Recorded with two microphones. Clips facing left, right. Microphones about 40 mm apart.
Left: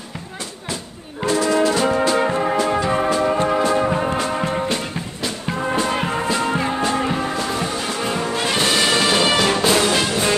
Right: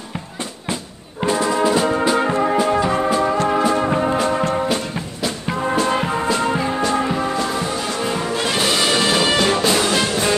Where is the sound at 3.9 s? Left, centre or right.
Centre.